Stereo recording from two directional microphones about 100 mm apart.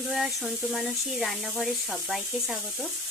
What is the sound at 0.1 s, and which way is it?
Speech, centre (ahead or behind).